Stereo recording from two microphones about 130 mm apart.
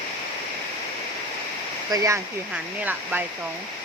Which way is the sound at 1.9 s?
25° right (ahead or behind).